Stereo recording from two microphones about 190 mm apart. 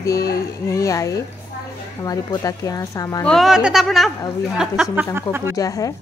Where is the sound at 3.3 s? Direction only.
Centre (ahead or behind).